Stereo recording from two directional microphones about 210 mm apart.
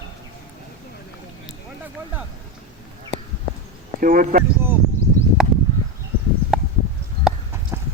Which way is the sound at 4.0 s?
40° right (ahead or behind).